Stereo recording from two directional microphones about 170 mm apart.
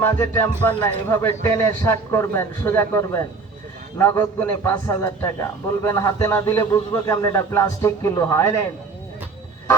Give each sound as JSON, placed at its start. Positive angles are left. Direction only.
{"t": 0.0, "sound": "a man's voice", "side_deg": 15}